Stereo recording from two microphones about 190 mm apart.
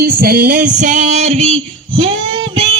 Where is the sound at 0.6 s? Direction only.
40° right (ahead or behind).